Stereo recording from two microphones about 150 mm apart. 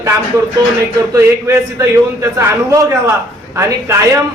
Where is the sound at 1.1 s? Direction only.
20° right (ahead or behind).